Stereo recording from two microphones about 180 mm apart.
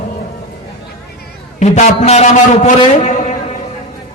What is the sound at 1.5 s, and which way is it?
A man's voice, 40° left (ahead or behind).